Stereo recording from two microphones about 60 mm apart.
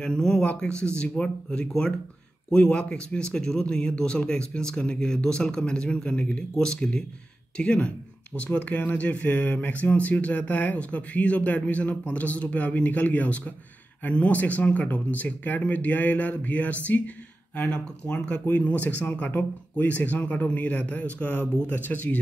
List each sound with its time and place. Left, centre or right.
0.0 s speech: centre